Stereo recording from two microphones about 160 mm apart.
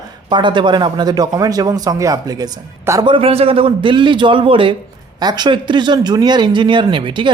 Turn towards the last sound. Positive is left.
turn(degrees=-30)  # may be behind; listen again after turning